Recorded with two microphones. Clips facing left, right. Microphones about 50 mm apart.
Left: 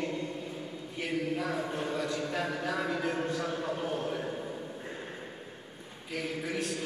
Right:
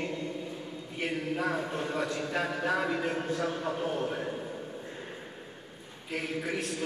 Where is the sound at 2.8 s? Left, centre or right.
Right.